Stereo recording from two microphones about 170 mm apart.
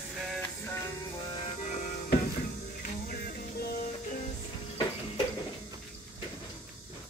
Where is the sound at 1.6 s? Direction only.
45° left (ahead or behind).